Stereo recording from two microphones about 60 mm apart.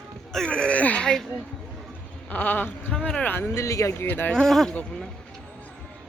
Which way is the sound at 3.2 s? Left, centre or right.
Left.